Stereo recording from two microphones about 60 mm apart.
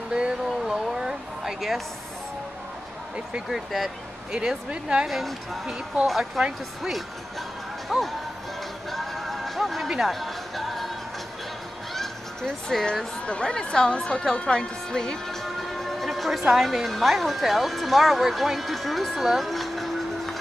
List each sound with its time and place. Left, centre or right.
0.1 s a sound: centre
3.4 s speech: centre
4.3 s speech: centre
5.0 s speech: centre
7.9 s speech: centre
8.9 s music: centre
11.9 s speech: centre